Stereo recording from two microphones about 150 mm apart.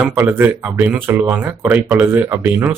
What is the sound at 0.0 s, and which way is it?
Speech, 10° right (ahead or behind).